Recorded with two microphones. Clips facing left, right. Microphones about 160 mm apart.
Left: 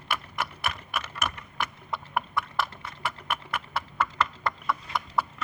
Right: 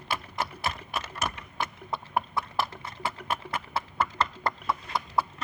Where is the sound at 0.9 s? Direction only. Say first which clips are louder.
Even; 25° right (ahead or behind).